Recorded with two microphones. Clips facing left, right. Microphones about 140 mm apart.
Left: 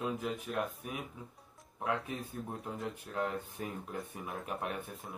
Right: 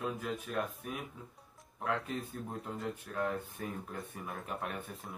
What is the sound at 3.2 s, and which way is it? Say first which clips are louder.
Speech: even; 20° left (ahead or behind).